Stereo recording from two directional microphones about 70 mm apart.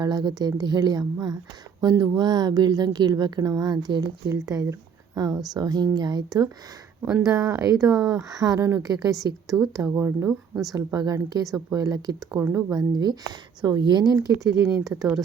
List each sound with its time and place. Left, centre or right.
0.0 s a woman's voice: right
5.5 s a woman's voice: right
7.3 s a woman's voice: right
8.8 s a woman's voice: right
9.9 s speech: right
10.9 s a woman's voice: right
12.7 s a woman's voice: right
13.6 s speech: right